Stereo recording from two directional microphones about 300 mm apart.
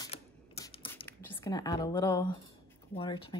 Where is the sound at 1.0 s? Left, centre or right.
Centre.